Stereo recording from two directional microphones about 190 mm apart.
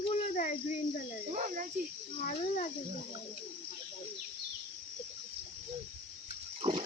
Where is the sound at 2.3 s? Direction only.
40° left (ahead or behind).